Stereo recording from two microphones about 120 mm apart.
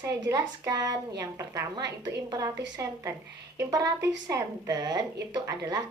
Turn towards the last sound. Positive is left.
turn(degrees=-30)  # may be behind; listen again after turning